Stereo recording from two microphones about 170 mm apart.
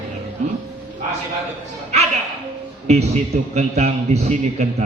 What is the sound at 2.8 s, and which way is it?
A man's voice, 40° right (ahead or behind).